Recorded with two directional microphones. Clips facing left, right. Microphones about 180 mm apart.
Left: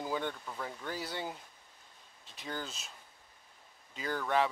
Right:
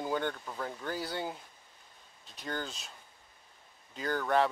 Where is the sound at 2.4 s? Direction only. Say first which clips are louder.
Right 3 dB; 5° left (ahead or behind).